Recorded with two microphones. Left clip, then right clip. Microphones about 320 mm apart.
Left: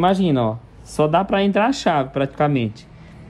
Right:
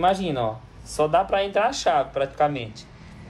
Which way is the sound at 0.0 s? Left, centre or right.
Centre.